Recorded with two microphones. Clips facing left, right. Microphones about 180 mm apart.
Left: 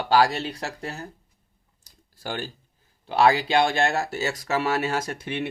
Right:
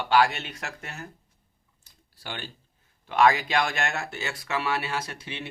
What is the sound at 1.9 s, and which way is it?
Computer keyboard, 40° left (ahead or behind).